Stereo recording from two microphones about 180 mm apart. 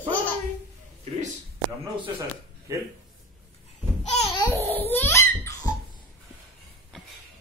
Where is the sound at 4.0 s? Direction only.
40° left (ahead or behind).